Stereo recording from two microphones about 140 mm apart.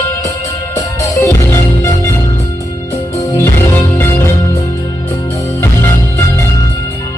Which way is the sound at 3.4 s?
15° left (ahead or behind).